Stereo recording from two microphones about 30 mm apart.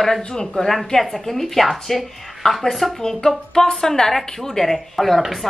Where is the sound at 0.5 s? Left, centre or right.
Centre.